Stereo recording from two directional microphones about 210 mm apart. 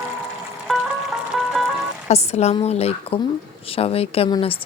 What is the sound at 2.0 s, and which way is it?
A woman's voice, 30° left (ahead or behind).